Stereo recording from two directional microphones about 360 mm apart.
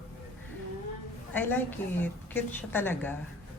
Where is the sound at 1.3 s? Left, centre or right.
Centre.